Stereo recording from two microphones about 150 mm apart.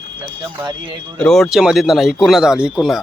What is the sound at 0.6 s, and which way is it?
Speech, 25° right (ahead or behind).